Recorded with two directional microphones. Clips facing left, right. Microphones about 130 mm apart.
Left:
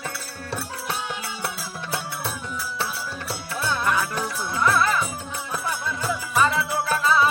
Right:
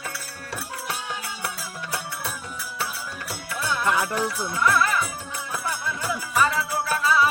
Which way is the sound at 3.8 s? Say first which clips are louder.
Right 1 dB; 25° right (ahead or behind).